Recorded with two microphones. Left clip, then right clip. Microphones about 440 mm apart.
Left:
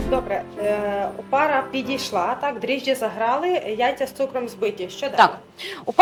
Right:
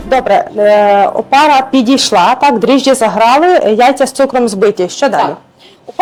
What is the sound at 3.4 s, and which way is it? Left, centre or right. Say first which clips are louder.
Speech: right 14 dB; right.